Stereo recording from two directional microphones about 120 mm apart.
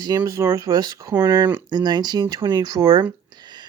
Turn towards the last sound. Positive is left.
turn(degrees=-35)  # may be behind; listen again after turning